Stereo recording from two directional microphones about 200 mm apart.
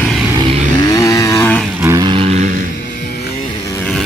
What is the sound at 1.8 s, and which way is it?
Vehicle, 15° right (ahead or behind).